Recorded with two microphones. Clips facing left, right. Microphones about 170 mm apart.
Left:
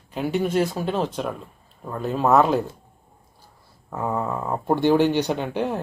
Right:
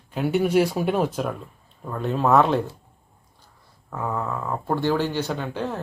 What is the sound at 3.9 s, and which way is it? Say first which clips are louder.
Speech: left 2 dB; 15° left (ahead or behind).